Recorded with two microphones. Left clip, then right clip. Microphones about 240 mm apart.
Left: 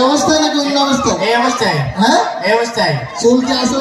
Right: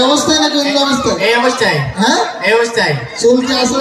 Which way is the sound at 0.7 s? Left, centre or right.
Centre.